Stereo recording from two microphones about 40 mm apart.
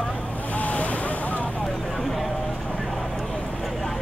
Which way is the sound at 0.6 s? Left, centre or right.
Left.